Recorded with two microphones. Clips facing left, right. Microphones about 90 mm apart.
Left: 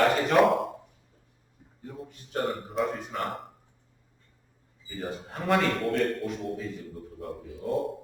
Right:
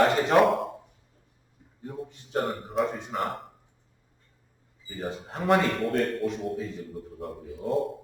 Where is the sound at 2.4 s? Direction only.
Centre (ahead or behind).